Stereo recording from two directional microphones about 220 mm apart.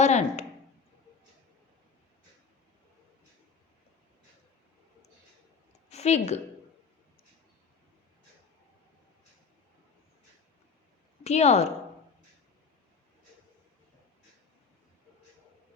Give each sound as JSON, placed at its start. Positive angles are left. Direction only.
{"t": 0.0, "sound": "a sound", "side_deg": 30}
{"t": 5.9, "sound": "a woman's voice", "side_deg": 30}
{"t": 11.2, "sound": "a woman's voice", "side_deg": 30}